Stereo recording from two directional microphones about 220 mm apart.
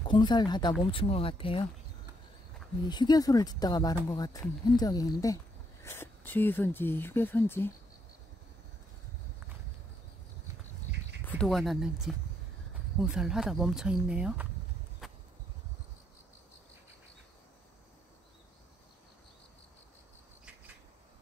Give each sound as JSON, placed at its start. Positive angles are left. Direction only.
{"t": 0.0, "sound": "speech", "side_deg": 20}
{"t": 2.9, "sound": "speech", "side_deg": 20}
{"t": 11.2, "sound": "speech", "side_deg": 5}
{"t": 15.0, "sound": "vehicle", "side_deg": 0}